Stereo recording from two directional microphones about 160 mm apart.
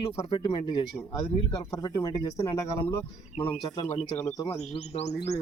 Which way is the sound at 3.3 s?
45° left (ahead or behind).